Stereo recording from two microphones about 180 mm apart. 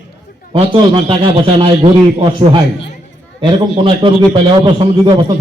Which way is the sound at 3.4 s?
30° right (ahead or behind).